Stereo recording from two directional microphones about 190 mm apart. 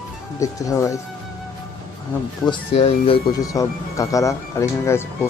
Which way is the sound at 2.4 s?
30° left (ahead or behind).